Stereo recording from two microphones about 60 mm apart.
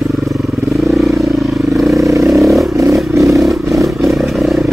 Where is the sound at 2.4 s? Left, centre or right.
Centre.